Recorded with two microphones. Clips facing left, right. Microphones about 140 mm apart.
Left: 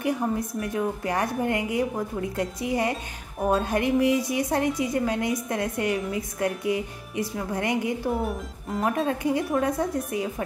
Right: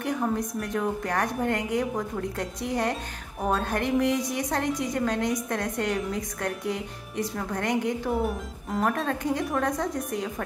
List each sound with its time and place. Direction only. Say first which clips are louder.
0.0 s a woman's voice: left 1 dB; 10° left (ahead or behind)
8.1 s speech: even; centre (ahead or behind)